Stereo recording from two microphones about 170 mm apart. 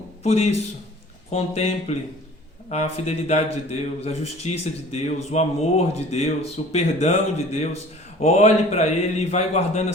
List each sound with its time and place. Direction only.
0.2 s a man's voice: 40° left (ahead or behind)